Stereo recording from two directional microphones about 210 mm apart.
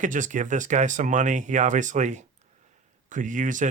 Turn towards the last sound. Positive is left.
turn(degrees=-40)  # may be behind; listen again after turning